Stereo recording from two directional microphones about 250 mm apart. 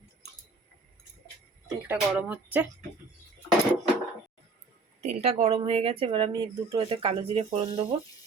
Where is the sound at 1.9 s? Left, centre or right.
Centre.